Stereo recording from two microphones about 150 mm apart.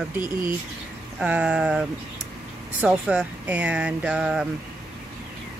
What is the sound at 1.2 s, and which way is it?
Speech, 10° right (ahead or behind).